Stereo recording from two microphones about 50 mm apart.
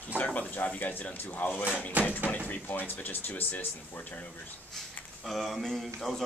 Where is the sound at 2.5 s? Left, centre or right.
Left.